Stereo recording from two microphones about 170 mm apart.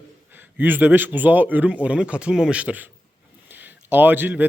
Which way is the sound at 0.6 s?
10° right (ahead or behind).